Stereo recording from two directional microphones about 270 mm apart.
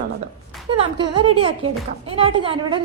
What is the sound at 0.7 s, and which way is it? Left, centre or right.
A woman's voice, centre.